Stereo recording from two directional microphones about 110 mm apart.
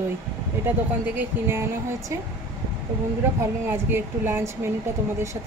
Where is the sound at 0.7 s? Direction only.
20° right (ahead or behind).